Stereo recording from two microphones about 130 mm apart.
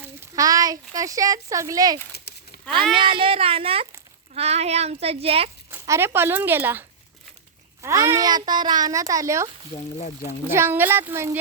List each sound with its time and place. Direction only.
0.3 s a child's voice: 25° right (ahead or behind)
2.9 s a child's voice: 40° right (ahead or behind)
5.8 s a child's voice: 20° right (ahead or behind)
9.7 s speech: 60° left (ahead or behind)
10.5 s speech: 15° right (ahead or behind)